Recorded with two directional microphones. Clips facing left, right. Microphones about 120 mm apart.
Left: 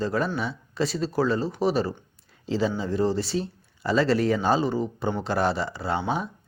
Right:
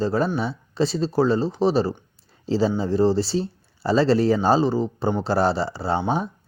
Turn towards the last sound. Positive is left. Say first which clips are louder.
# right 4 dB
turn(degrees=-30)  # may be behind; listen again after turning